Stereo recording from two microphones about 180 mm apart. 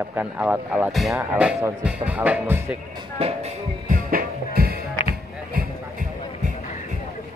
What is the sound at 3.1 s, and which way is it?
Music, 35° right (ahead or behind).